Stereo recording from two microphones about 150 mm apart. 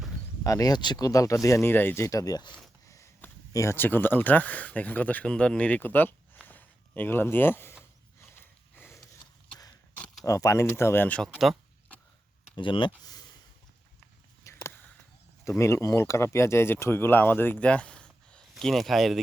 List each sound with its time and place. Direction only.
0.4 s speech: 25° left (ahead or behind)
6.5 s a sound: 10° left (ahead or behind)
8.2 s sniff: 15° left (ahead or behind)
10.2 s speech: 20° left (ahead or behind)
11.2 s speech: centre (ahead or behind)
12.5 s speech: 30° left (ahead or behind)
14.4 s a sound: 15° left (ahead or behind)
15.4 s speech: 20° left (ahead or behind); by 19.2 s centre (ahead or behind)